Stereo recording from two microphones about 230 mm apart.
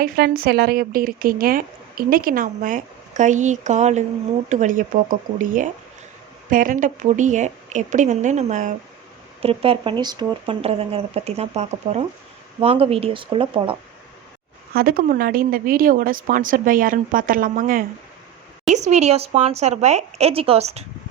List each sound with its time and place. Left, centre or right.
0.0 s speech: right
14.7 s speech: right